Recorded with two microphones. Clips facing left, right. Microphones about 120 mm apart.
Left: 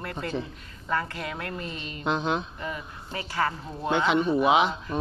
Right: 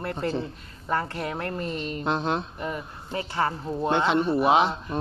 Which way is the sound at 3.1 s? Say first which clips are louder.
Right 2 dB; 30° right (ahead or behind).